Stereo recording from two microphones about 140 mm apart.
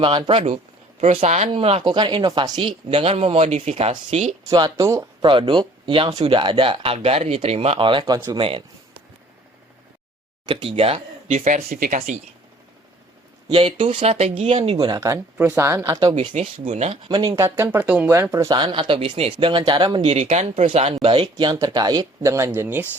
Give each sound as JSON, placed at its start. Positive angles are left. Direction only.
{"t": 0.0, "sound": "speech", "side_deg": -35}
{"t": 1.8, "sound": "speech", "side_deg": -30}
{"t": 4.4, "sound": "speech", "side_deg": -30}
{"t": 5.2, "sound": "speech", "side_deg": -40}
{"t": 8.4, "sound": "speech", "side_deg": -40}
{"t": 10.4, "sound": "speech", "side_deg": -40}
{"t": 11.3, "sound": "speech", "side_deg": -65}
{"t": 13.5, "sound": "speech", "side_deg": -40}
{"t": 16.3, "sound": "speech", "side_deg": -55}
{"t": 17.1, "sound": "speech", "side_deg": -30}
{"t": 17.6, "sound": "speech", "side_deg": -15}
{"t": 20.0, "sound": "speech", "side_deg": -50}